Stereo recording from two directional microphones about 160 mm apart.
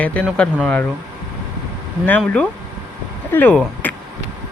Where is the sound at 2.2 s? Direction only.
5° left (ahead or behind).